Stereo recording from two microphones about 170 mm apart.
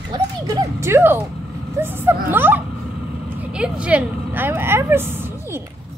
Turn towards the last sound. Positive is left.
turn(degrees=-15)  # may be behind; listen again after turning